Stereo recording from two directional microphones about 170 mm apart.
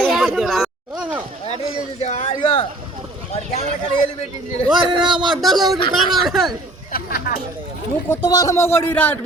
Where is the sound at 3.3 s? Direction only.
40° left (ahead or behind).